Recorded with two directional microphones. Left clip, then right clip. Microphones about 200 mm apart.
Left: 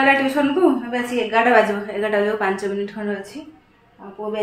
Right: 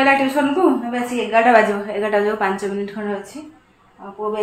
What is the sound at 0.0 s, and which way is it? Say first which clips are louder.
Speech: right 1 dB; 20° right (ahead or behind).